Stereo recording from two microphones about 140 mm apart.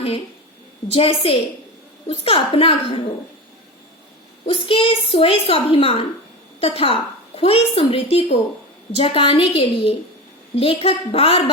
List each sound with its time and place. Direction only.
0.9 s a woman's voice: 45° left (ahead or behind)
4.4 s a child's voice: 40° left (ahead or behind)